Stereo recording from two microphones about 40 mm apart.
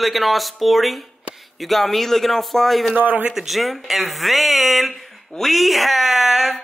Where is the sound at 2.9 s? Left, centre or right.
Right.